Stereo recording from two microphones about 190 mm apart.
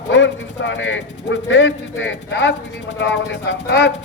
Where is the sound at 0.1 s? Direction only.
70° left (ahead or behind).